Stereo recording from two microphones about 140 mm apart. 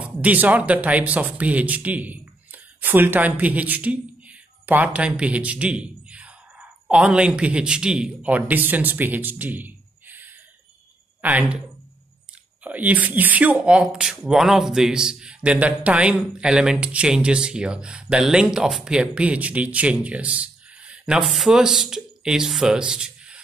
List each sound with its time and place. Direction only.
0.0 s speech: 10° right (ahead or behind)
12.6 s speech: 10° right (ahead or behind)